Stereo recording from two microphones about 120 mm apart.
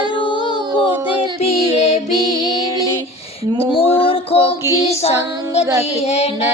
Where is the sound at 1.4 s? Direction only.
55° left (ahead or behind).